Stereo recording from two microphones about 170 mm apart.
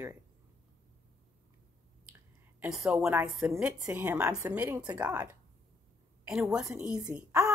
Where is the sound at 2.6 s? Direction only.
Centre (ahead or behind).